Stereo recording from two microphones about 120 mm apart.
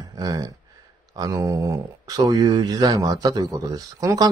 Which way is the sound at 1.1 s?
30° right (ahead or behind).